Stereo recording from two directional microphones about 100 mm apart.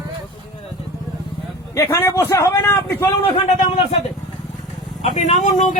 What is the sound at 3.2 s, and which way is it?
Speech, 65° left (ahead or behind).